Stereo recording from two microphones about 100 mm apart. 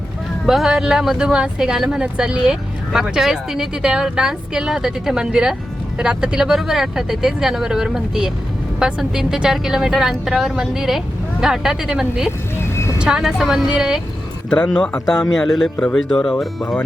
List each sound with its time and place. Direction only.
0.4 s a woman's voice: 5° right (ahead or behind)
12.7 s vehicle: 25° left (ahead or behind)
13.0 s speech: 5° right (ahead or behind)
14.5 s a woman's voice: 10° left (ahead or behind)